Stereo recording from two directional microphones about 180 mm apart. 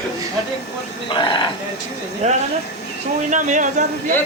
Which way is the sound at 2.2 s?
40° right (ahead or behind).